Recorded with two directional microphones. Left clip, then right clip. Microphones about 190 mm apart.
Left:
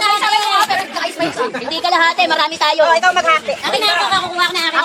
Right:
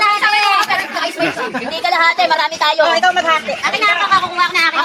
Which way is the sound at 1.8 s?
15° left (ahead or behind).